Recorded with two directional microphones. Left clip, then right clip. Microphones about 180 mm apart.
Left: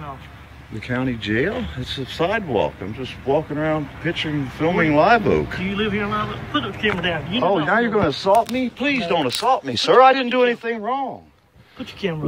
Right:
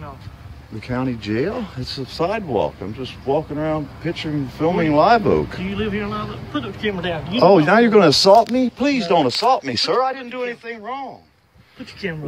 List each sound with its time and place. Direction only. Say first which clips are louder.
0.7 s speech: even; 10° right (ahead or behind)
6.8 s speech: left 1 dB; 25° right (ahead or behind); by 8.3 s 50° right (ahead or behind)
8.5 s speech: right 2 dB; 30° right (ahead or behind)
10.0 s a man's voice: left 9 dB; 50° left (ahead or behind)